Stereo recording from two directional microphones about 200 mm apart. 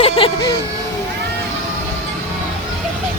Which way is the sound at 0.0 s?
25° left (ahead or behind).